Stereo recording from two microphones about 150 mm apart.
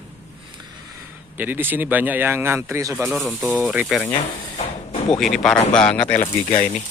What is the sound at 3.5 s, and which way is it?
Speech, centre (ahead or behind).